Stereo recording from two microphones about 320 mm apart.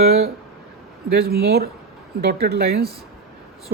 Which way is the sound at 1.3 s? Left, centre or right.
Right.